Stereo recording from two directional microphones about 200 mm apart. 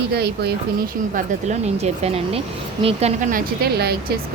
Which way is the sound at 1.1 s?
35° right (ahead or behind).